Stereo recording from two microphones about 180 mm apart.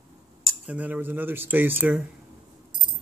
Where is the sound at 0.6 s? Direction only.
10° right (ahead or behind).